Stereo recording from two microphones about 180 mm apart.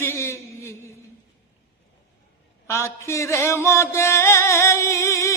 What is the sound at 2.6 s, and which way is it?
Speech, 15° left (ahead or behind).